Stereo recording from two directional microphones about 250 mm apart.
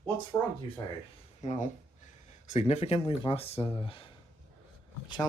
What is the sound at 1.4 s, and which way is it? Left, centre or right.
Speech, left.